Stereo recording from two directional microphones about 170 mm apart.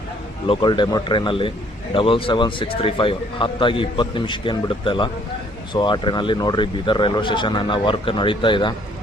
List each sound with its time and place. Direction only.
0.4 s a man's voice: 30° left (ahead or behind)